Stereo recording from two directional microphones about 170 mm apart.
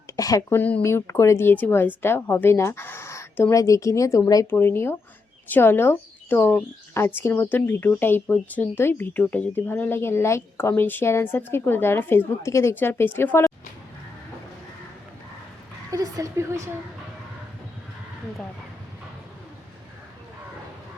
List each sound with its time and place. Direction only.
0.2 s a woman's voice: 20° left (ahead or behind)
15.9 s a woman's voice: 20° right (ahead or behind)